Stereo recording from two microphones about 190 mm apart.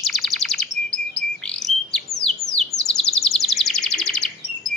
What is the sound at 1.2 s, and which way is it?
Bird, 5° left (ahead or behind).